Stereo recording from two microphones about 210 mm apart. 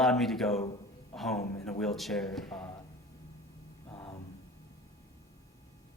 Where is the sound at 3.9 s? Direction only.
25° left (ahead or behind).